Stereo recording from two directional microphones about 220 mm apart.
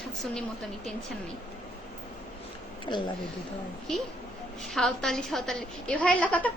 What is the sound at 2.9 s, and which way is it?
Speech, 20° left (ahead or behind).